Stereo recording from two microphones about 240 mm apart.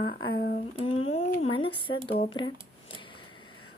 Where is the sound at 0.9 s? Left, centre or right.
Left.